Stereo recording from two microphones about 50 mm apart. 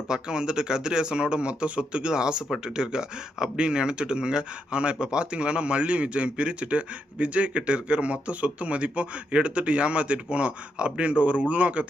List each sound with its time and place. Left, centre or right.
0.1 s speech: centre